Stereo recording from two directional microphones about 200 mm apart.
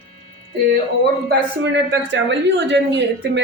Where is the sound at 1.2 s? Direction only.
60° right (ahead or behind).